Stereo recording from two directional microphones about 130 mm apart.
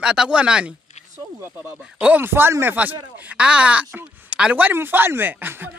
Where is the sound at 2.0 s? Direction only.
15° right (ahead or behind).